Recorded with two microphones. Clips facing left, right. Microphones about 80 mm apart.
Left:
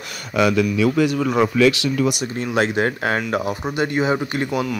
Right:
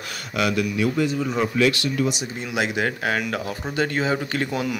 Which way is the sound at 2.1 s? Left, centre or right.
Left.